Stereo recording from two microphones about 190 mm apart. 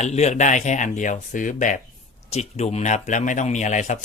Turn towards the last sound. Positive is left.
turn(degrees=40)  # may be behind; listen again after turning